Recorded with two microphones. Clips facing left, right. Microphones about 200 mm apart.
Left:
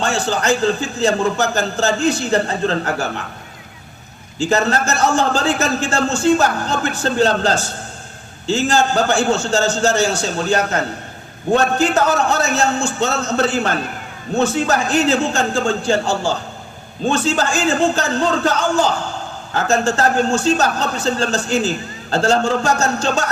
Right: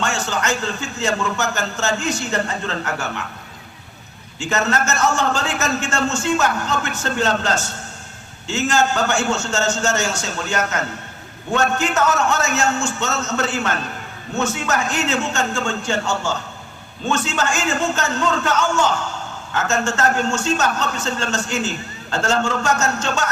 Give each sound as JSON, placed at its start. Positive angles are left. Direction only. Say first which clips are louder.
{"t": 0.0, "sound": "a man's voice", "louder": "left 4 dB", "side_deg": 35}
{"t": 4.4, "sound": "a man's voice", "louder": "left 4 dB", "side_deg": 35}